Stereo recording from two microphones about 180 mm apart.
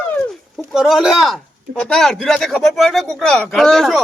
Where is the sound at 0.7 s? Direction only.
Centre (ahead or behind).